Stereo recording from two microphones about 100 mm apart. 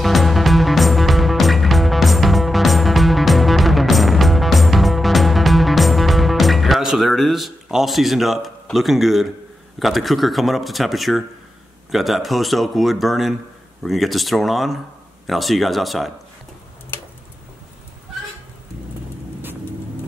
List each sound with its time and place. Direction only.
0.0 s music: centre (ahead or behind)
8.7 s speech: centre (ahead or behind)
16.9 s tick-tock: 20° left (ahead or behind)